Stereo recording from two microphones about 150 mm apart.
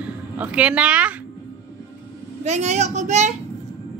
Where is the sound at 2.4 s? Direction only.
50° right (ahead or behind).